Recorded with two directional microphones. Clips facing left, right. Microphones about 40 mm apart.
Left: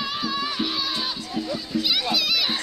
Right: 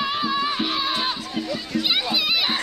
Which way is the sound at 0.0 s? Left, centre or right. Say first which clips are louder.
Right 4 dB; right.